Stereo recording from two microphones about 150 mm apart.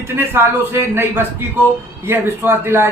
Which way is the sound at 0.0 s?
15° right (ahead or behind).